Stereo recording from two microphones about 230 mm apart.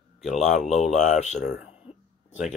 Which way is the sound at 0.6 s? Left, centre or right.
Centre.